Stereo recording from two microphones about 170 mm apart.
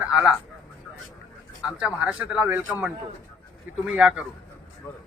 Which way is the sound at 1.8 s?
5° right (ahead or behind).